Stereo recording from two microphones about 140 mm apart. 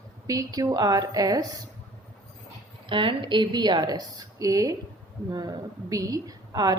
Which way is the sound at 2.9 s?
35° right (ahead or behind).